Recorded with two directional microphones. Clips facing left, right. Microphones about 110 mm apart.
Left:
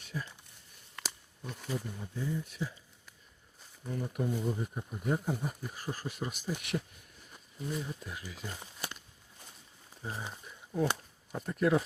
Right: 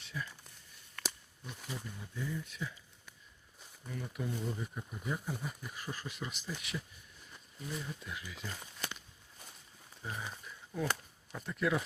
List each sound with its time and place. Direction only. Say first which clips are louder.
0.0 s a sound: left 2 dB; 40° left (ahead or behind)
1.0 s a sound: left 1 dB; 5° right (ahead or behind)
1.7 s speech: left 7 dB; 35° left (ahead or behind)
3.8 s speech: left 6 dB; 35° left (ahead or behind)
4.3 s speech: left 5 dB; 10° left (ahead or behind)
4.5 s speech: left 4 dB; 30° left (ahead or behind)
5.0 s speech: left 7 dB; 45° left (ahead or behind)
7.8 s speech: left 3 dB; 30° left (ahead or behind)
8.4 s speech: left 1 dB; 20° left (ahead or behind)
10.0 s speech: left 2 dB; 25° left (ahead or behind)
11.3 s speech: left 5 dB; 40° left (ahead or behind)